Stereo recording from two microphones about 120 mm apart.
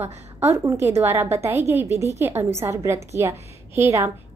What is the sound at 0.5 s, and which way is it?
A woman's voice, 20° right (ahead or behind).